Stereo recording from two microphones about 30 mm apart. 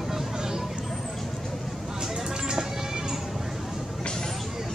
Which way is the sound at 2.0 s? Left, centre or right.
Centre.